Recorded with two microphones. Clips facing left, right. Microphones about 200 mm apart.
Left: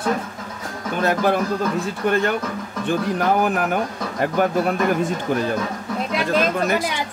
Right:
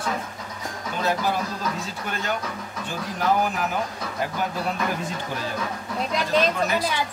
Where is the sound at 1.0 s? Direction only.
55° left (ahead or behind).